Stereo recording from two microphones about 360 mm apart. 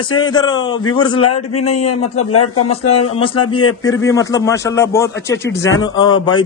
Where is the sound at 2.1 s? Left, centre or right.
Left.